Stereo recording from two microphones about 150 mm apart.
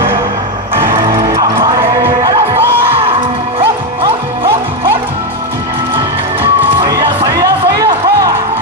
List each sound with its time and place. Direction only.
0.8 s music: 25° right (ahead or behind)
6.8 s music: 25° right (ahead or behind)